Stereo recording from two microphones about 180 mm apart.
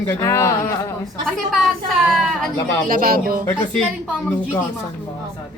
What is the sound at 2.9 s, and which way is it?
Speech, 50° right (ahead or behind).